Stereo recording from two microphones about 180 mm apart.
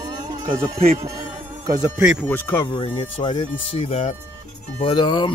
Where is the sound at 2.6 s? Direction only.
25° left (ahead or behind).